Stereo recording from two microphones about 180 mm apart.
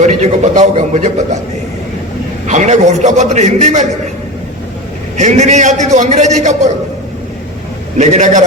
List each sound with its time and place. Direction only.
0.0 s a man's voice: 40° right (ahead or behind)
2.5 s a man's voice: 40° right (ahead or behind)
5.1 s a man's voice: 40° right (ahead or behind)
7.9 s a man's voice: 40° right (ahead or behind)